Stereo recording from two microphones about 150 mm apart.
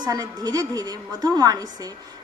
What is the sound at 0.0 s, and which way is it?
Speech, 25° right (ahead or behind).